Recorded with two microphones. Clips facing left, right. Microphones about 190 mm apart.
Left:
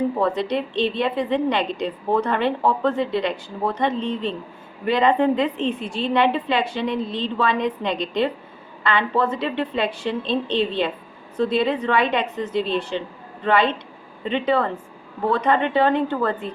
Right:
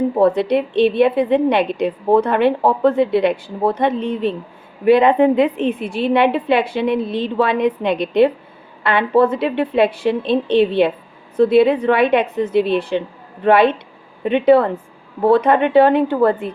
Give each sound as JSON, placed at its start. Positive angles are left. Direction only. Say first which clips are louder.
{"t": 0.2, "sound": "a woman's voice", "louder": "right 7 dB", "side_deg": -60}